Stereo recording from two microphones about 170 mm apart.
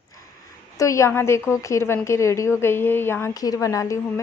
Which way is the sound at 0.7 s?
20° left (ahead or behind).